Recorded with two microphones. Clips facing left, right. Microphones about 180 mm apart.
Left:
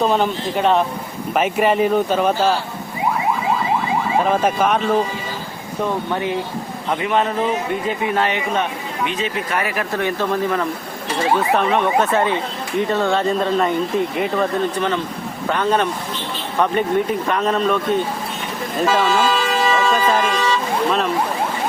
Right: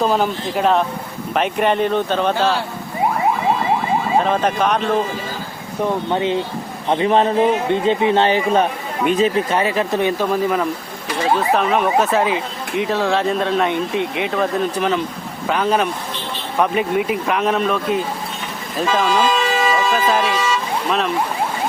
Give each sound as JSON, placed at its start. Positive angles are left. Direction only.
{"t": 0.0, "sound": "speech", "side_deg": 0}
{"t": 4.2, "sound": "speech", "side_deg": 5}
{"t": 6.1, "sound": "a man's voice", "side_deg": -20}
{"t": 11.5, "sound": "speech", "side_deg": -5}